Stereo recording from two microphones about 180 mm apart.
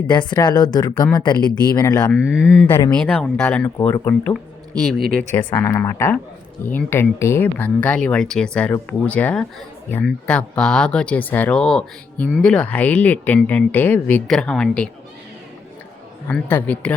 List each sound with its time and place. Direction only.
0.1 s speech: 25° left (ahead or behind)
2.1 s speech: 5° right (ahead or behind)
2.6 s speech: 10° left (ahead or behind)
5.5 s speech: 15° left (ahead or behind)
16.2 s speech: 10° left (ahead or behind)